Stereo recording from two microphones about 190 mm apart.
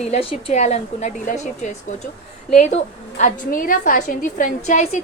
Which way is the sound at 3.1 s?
45° left (ahead or behind).